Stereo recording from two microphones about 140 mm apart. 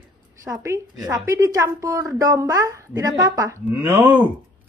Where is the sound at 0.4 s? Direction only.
20° right (ahead or behind).